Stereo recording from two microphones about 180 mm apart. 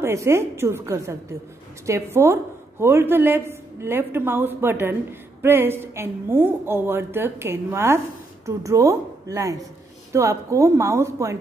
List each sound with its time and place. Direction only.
0.0 s a woman's voice: 15° right (ahead or behind)